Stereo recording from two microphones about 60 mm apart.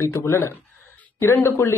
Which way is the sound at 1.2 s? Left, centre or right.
Left.